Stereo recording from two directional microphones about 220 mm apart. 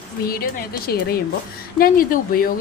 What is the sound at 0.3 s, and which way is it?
Speech, 40° left (ahead or behind).